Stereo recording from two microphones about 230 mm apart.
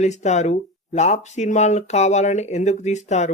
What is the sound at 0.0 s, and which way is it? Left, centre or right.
Speech, left.